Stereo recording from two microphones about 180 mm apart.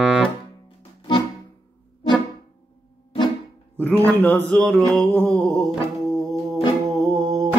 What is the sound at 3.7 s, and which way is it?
Mantra, 10° left (ahead or behind).